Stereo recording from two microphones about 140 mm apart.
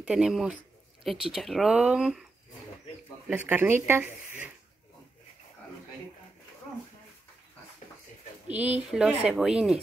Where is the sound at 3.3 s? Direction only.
10° right (ahead or behind).